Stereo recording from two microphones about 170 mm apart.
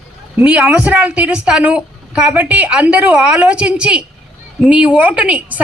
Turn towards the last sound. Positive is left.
turn(degrees=-10)  # may be behind; listen again after turning